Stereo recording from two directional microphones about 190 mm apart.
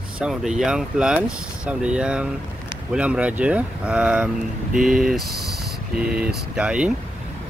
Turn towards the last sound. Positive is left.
turn(degrees=-5)  # may be behind; listen again after turning